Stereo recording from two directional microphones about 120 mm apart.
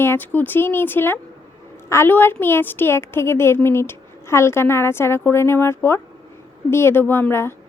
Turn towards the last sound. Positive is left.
turn(degrees=20)  # may be behind; listen again after turning